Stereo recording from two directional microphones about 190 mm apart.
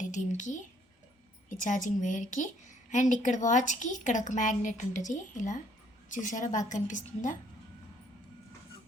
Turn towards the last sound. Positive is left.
turn(degrees=40)  # may be behind; listen again after turning